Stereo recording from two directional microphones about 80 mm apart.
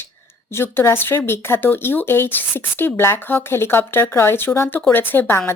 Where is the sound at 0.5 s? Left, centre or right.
Left.